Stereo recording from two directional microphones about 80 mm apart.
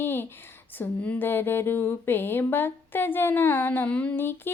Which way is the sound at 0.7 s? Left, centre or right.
Left.